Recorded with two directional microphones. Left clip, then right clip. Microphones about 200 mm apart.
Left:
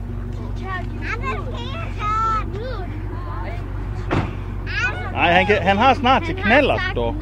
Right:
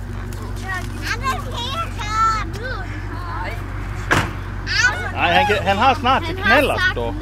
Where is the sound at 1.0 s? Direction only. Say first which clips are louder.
Right 5 dB; 25° left (ahead or behind).